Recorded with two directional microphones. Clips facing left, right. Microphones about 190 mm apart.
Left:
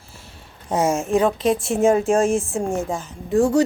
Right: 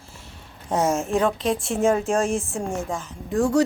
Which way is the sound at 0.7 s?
Centre (ahead or behind).